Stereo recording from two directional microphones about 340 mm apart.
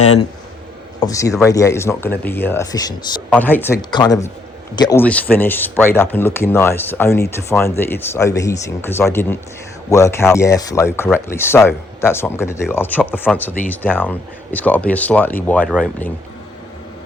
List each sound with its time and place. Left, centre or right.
0.0 s a man's voice: centre